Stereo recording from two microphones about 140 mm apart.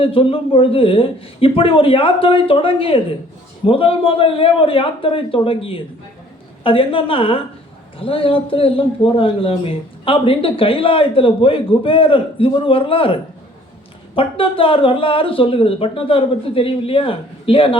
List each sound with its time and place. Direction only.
0.0 s a man's voice: 40° left (ahead or behind)
14.2 s a man's voice: 40° left (ahead or behind)